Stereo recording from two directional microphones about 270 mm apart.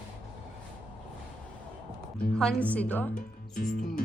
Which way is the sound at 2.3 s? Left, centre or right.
Centre.